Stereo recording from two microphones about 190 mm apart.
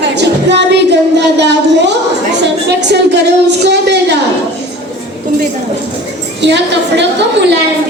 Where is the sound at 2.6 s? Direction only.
65° right (ahead or behind).